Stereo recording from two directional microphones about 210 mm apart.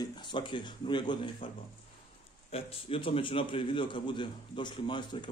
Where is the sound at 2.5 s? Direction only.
25° left (ahead or behind).